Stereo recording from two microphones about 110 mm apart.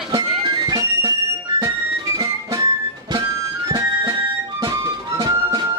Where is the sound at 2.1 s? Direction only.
30° right (ahead or behind).